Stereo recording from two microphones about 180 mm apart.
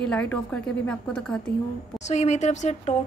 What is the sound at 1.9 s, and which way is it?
Speech, 40° left (ahead or behind).